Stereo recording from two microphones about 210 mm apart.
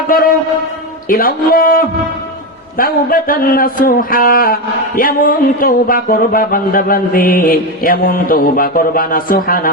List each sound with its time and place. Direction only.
0.1 s speech: 45° left (ahead or behind)